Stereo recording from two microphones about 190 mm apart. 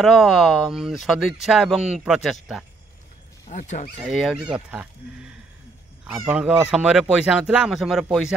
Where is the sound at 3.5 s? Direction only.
40° left (ahead or behind).